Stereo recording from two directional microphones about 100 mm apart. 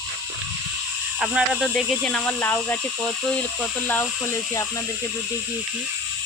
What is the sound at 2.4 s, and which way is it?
Speech, 20° left (ahead or behind).